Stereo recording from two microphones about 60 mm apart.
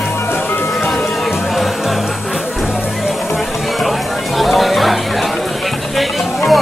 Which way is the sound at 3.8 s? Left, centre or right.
Centre.